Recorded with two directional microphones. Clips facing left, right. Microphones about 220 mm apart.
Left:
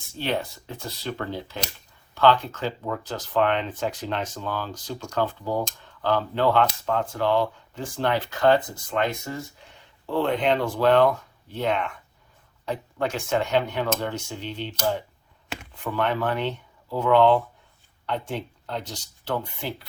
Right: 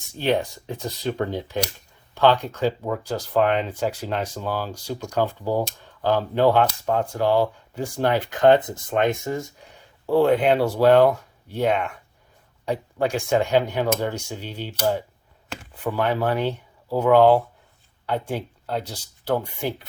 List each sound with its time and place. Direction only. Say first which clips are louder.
0.2 s speech: right 5 dB; 15° right (ahead or behind)
15.8 s speech: right 3 dB; 10° right (ahead or behind)
16.3 s speech: right 3 dB; 40° right (ahead or behind)
16.9 s speech: right 3 dB; 10° right (ahead or behind)